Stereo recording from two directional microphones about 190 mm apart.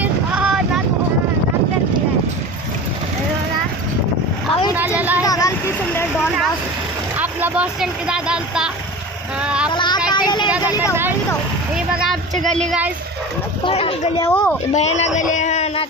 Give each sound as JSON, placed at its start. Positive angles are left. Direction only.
{"t": 0.0, "sound": "wind noise", "side_deg": -5}
{"t": 4.7, "sound": "a sound", "side_deg": -10}
{"t": 5.2, "sound": "vehicle", "side_deg": 20}
{"t": 7.2, "sound": "a sound", "side_deg": -5}
{"t": 9.4, "sound": "child singing", "side_deg": -5}
{"t": 9.7, "sound": "child singing", "side_deg": 25}
{"t": 10.1, "sound": "vehicle", "side_deg": 25}
{"t": 11.2, "sound": "speech", "side_deg": -5}
{"t": 13.7, "sound": "speech", "side_deg": 30}
{"t": 14.2, "sound": "a woman's voice", "side_deg": 10}
{"t": 14.7, "sound": "a man's voice", "side_deg": 35}